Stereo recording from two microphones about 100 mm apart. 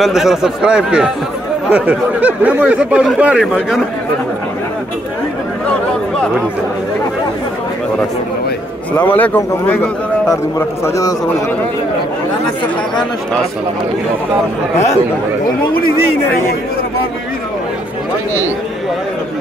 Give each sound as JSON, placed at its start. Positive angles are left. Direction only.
{"t": 0.0, "sound": "speech", "side_deg": -5}
{"t": 8.9, "sound": "a man's voice", "side_deg": 15}